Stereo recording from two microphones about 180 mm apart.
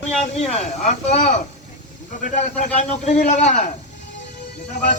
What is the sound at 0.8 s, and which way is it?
A man's voice, 40° left (ahead or behind).